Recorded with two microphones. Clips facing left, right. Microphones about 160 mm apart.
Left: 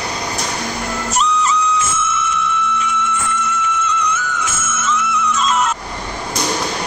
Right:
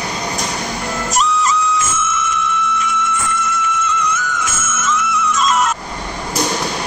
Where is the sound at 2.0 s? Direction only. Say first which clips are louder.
Even; 50° right (ahead or behind).